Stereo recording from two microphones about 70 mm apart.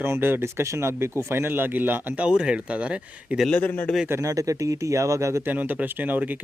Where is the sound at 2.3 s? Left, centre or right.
Centre.